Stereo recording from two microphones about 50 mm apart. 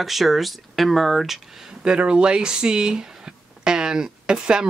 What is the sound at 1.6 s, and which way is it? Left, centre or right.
Speech, centre.